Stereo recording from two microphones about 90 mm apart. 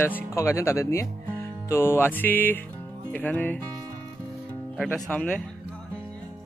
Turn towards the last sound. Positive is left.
turn(degrees=15)  # may be behind; listen again after turning